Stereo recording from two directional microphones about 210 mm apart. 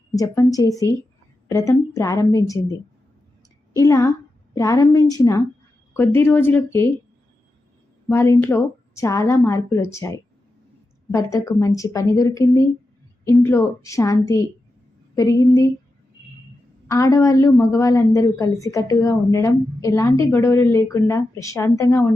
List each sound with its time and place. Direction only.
0.1 s speech: 15° left (ahead or behind)
3.8 s speech: 15° left (ahead or behind)
8.1 s a woman's voice: 10° left (ahead or behind)
16.9 s speech: 15° left (ahead or behind)